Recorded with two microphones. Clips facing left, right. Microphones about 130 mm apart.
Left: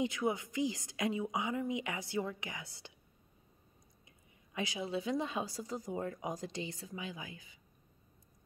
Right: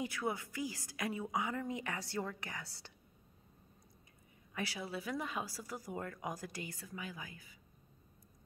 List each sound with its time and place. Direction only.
0.0 s a woman's voice: 20° left (ahead or behind)
4.6 s speech: 20° left (ahead or behind)